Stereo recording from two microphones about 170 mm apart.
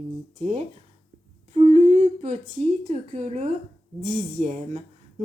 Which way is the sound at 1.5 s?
40° right (ahead or behind).